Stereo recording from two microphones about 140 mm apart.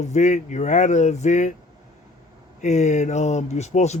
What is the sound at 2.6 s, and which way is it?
Speech, 55° left (ahead or behind).